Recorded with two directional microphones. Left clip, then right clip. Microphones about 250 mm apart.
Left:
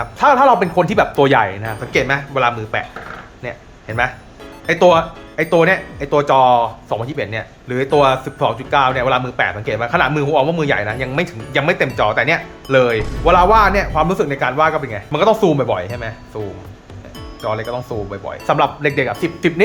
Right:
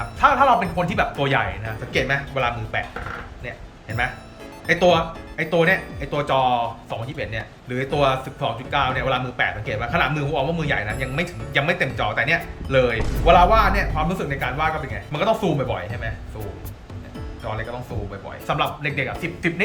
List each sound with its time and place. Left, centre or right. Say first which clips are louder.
0.2 s speech: left 5 dB; left
13.0 s speech: left 5 dB; centre
13.2 s speech: left 4 dB; centre
17.4 s speech: left 9 dB; centre